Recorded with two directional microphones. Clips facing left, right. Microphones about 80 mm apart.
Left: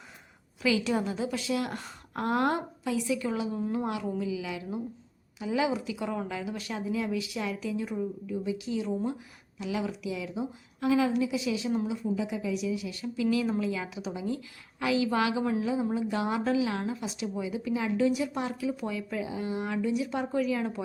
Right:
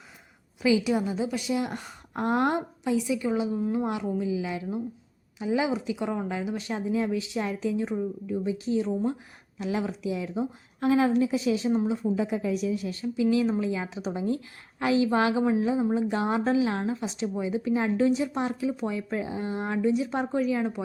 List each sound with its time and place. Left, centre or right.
0.6 s speech: centre
3.6 s speech: centre
4.2 s a woman's voice: right
13.3 s a woman's voice: right